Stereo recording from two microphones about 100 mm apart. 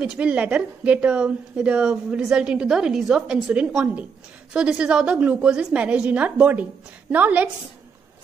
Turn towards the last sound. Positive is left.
turn(degrees=-15)  # may be behind; listen again after turning